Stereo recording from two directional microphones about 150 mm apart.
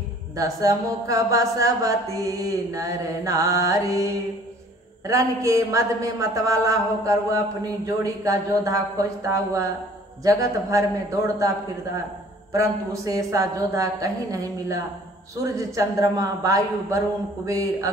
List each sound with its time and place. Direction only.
0.4 s a man's voice: 25° right (ahead or behind)
12.5 s a man's voice: 20° right (ahead or behind)